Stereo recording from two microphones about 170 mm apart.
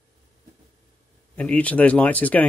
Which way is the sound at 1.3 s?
10° left (ahead or behind).